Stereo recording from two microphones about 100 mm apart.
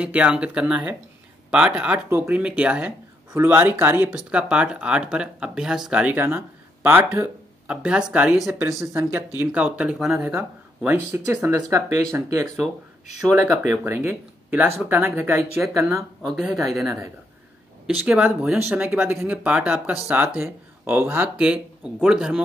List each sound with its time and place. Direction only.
0.0 s speech: 10° right (ahead or behind)
4.1 s speech: 10° right (ahead or behind)
8.5 s speech: 30° right (ahead or behind)
9.4 s speech: 10° right (ahead or behind)
10.2 s speech: 20° right (ahead or behind)
13.8 s speech: 25° right (ahead or behind)
16.0 s speech: centre (ahead or behind)
18.0 s speech: 5° right (ahead or behind)
18.9 s speech: 20° right (ahead or behind)